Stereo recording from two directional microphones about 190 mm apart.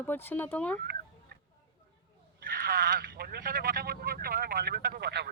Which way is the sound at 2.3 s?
55° right (ahead or behind).